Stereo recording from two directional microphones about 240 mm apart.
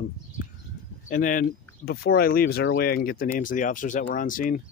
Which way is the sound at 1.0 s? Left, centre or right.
Left.